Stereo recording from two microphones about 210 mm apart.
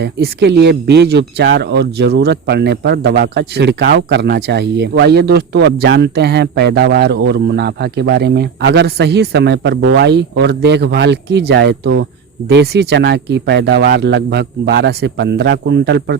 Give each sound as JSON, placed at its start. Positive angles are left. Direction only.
{"t": 0.0, "sound": "a man's voice", "side_deg": -55}